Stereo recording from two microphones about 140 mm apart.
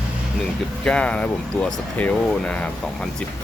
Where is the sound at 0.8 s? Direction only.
5° left (ahead or behind).